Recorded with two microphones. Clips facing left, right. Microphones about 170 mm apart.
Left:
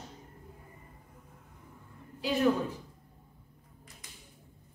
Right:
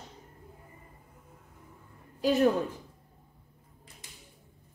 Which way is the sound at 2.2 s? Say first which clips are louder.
Right 4 dB; 45° right (ahead or behind).